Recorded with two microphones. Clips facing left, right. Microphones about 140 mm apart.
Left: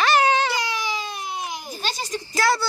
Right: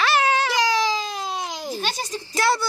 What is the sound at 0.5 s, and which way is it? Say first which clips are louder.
Baby cry: right 6 dB; 90° right.